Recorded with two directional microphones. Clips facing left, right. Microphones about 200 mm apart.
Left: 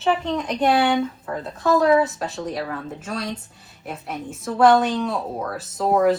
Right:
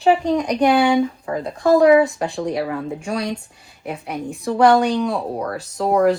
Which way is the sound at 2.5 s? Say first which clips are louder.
Right 5 dB; 10° right (ahead or behind).